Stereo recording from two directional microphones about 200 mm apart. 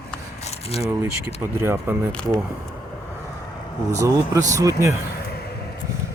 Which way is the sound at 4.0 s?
15° right (ahead or behind).